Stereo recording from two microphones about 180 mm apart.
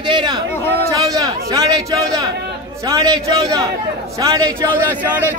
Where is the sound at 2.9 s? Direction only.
20° right (ahead or behind).